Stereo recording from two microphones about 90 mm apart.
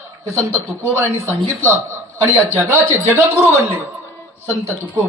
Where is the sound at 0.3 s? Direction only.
30° right (ahead or behind).